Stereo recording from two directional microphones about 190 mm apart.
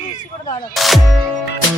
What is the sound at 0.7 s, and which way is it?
Music, centre (ahead or behind).